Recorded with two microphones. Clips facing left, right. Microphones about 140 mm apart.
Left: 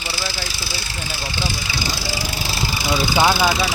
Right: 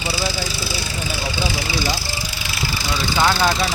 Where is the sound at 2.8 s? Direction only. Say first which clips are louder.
Left 2 dB; 10° left (ahead or behind).